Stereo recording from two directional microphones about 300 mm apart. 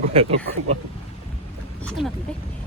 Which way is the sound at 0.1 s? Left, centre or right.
Centre.